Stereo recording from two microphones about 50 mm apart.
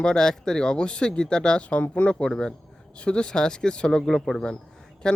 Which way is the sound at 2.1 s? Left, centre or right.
Centre.